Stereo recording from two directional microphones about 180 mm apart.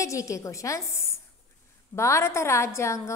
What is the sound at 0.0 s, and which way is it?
A woman's voice, 20° left (ahead or behind).